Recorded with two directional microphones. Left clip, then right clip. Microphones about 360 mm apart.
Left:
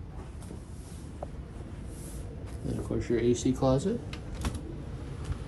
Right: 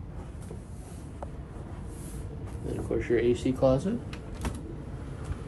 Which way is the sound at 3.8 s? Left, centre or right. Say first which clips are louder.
Left 1 dB; centre.